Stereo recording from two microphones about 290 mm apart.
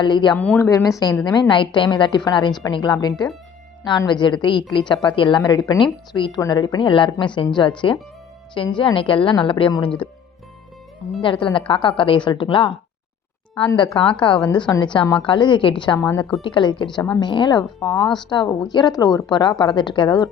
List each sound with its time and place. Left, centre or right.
0.0 s a woman's voice: centre
11.2 s a woman's voice: centre
16.4 s a woman's voice: centre